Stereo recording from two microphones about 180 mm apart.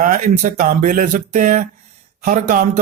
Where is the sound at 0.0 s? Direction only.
45° right (ahead or behind).